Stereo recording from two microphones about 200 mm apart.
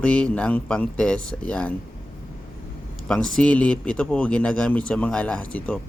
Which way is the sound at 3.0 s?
5° left (ahead or behind).